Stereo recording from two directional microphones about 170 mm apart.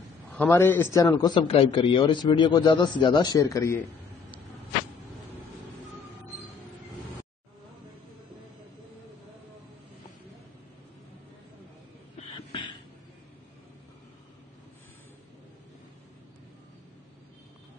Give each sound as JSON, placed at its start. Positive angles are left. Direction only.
{"t": 0.3, "sound": "a man's voice", "side_deg": 10}